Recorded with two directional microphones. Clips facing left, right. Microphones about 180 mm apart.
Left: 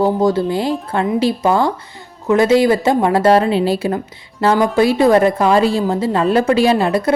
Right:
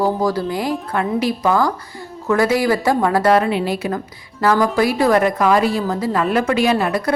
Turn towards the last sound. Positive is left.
turn(degrees=25)  # may be behind; listen again after turning